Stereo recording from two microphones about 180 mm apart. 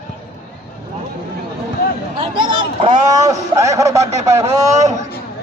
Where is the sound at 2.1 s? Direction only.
30° right (ahead or behind).